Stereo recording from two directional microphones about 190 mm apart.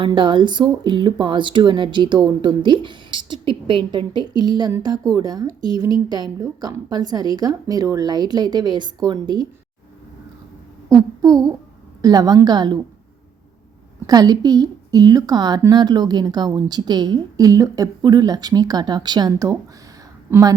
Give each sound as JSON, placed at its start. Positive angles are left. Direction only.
{"t": 0.0, "sound": "a woman's voice", "side_deg": -25}
{"t": 10.8, "sound": "a sound", "side_deg": -20}
{"t": 12.0, "sound": "a woman's voice", "side_deg": -20}
{"t": 14.1, "sound": "a woman's voice", "side_deg": -20}